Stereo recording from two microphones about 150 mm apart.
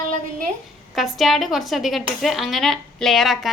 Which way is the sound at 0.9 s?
Centre (ahead or behind).